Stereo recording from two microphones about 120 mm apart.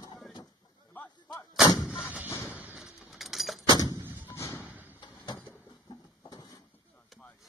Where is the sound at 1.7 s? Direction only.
5° right (ahead or behind).